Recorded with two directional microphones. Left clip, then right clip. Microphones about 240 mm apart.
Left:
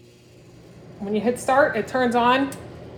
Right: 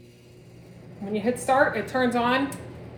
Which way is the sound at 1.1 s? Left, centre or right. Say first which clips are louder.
Left 2 dB; left.